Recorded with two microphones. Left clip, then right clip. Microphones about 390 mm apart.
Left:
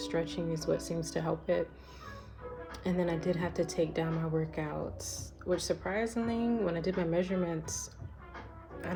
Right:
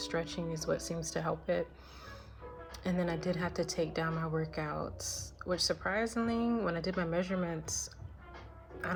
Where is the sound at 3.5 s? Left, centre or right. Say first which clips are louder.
Left 3 dB; centre.